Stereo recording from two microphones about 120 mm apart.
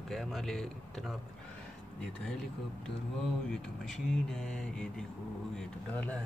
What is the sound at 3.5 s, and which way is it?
Speech, 5° left (ahead or behind).